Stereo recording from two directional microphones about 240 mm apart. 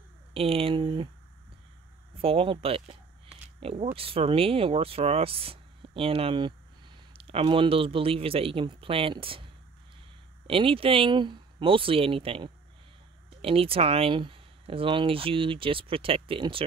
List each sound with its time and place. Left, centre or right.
0.3 s speech: right
2.2 s speech: right
10.4 s speech: right